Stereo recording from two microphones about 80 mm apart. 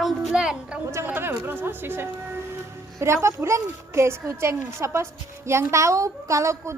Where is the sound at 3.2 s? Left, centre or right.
Right.